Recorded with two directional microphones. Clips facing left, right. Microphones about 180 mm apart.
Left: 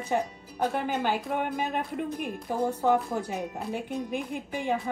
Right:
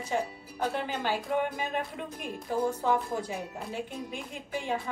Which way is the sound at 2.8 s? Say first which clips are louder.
Left 3 dB; 60° left (ahead or behind).